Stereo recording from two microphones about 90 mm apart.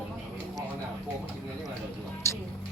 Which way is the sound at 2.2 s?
30° left (ahead or behind).